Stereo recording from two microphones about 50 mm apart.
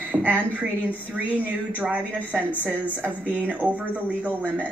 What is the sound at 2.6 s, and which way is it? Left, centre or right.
A woman's voice, right.